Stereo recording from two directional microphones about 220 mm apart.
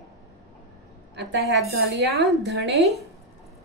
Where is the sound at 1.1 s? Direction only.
50° right (ahead or behind).